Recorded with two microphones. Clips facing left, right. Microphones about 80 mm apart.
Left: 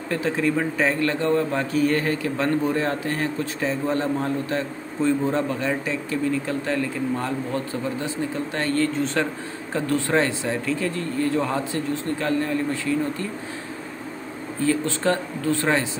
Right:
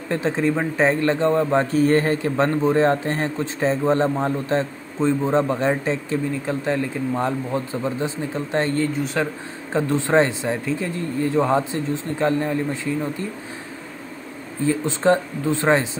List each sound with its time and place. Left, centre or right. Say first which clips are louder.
0.1 s a man's voice: right 2 dB; right
14.6 s a man's voice: right 2 dB; right